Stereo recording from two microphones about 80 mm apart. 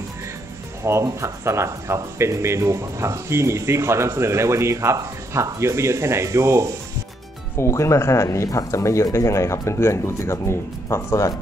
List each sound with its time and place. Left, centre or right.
0.8 s speech: right
7.5 s speech: left